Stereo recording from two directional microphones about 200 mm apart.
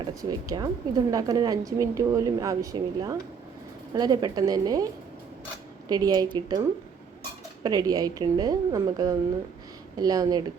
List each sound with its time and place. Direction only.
0.0 s a woman's voice: 20° right (ahead or behind)
5.9 s speech: 20° right (ahead or behind)
7.6 s speech: 20° right (ahead or behind)